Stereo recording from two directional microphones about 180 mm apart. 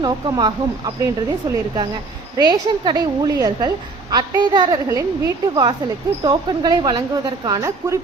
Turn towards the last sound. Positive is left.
turn(degrees=-20)  # may be behind; listen again after turning